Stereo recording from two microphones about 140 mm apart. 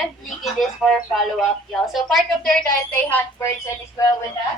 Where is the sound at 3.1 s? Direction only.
20° left (ahead or behind).